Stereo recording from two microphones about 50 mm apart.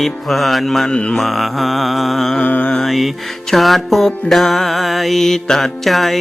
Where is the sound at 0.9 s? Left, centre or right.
Left.